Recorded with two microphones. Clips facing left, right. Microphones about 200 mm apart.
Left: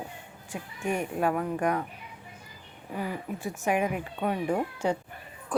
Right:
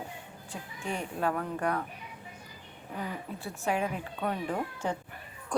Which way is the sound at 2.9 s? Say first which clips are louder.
Left 4 dB; 15° left (ahead or behind).